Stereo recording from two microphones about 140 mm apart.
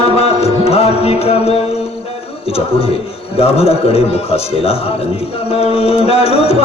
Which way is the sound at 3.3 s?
45° left (ahead or behind).